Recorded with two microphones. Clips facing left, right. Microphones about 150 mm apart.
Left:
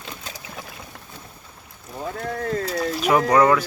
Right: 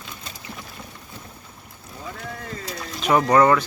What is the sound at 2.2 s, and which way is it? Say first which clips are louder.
Speech: left 11 dB; 70° left (ahead or behind).